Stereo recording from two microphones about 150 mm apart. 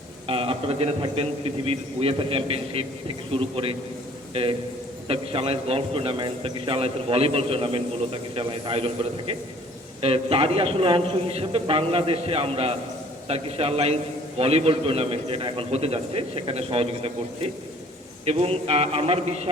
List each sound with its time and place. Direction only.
0.3 s a sound: 40° right (ahead or behind)
1.0 s a man's voice: 40° right (ahead or behind)
5.0 s a man's voice: 40° right (ahead or behind)